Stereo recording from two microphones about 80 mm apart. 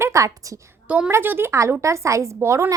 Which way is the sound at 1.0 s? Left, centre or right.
Right.